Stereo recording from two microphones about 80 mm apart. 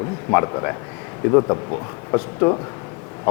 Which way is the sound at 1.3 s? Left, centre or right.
Left.